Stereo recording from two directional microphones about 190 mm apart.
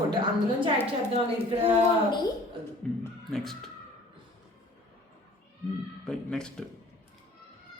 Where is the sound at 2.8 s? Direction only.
5° left (ahead or behind).